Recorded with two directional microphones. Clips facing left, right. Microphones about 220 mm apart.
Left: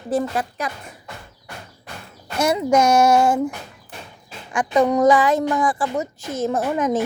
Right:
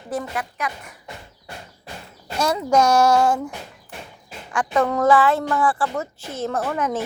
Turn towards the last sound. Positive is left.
turn(degrees=15)  # may be behind; listen again after turning